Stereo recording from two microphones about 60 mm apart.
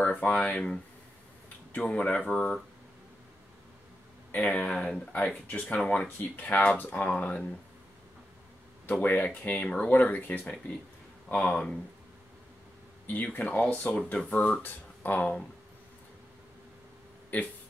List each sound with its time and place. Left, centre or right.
0.0 s speech: left
4.3 s speech: left
9.0 s speech: left
13.0 s speech: left
14.6 s speech: left
17.3 s speech: left